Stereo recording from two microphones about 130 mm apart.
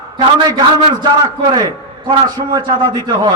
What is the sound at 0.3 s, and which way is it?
A man's voice, 35° right (ahead or behind).